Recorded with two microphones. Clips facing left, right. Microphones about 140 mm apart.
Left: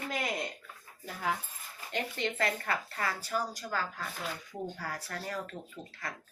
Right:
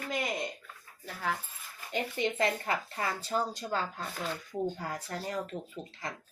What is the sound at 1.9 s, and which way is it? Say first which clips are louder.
Speech: right 3 dB; 15° right (ahead or behind).